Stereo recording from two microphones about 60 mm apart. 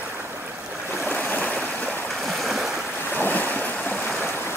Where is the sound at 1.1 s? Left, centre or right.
Left.